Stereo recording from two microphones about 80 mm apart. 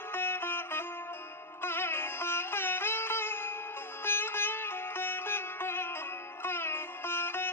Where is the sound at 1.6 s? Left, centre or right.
Left.